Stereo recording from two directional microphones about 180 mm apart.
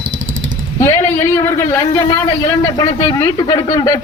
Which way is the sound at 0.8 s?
15° left (ahead or behind).